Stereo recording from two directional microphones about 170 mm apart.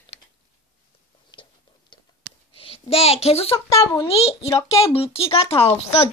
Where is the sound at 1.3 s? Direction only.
30° left (ahead or behind).